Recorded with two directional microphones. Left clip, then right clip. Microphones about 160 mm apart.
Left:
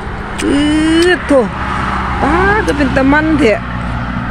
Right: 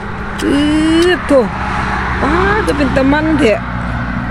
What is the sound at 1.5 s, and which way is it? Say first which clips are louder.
Vehicle: even; 65° left (ahead or behind).